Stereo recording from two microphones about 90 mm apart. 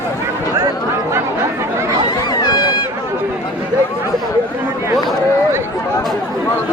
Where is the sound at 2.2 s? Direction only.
50° left (ahead or behind).